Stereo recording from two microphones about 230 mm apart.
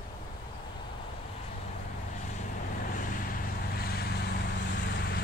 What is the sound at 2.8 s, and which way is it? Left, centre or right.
Vehicle, left.